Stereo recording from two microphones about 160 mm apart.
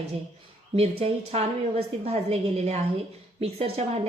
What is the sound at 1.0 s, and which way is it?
A woman's voice, 40° right (ahead or behind).